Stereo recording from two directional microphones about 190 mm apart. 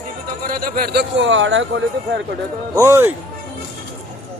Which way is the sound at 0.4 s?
50° right (ahead or behind).